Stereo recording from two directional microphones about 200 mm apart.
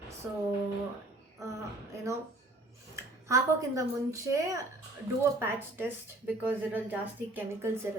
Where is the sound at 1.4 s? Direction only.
15° right (ahead or behind).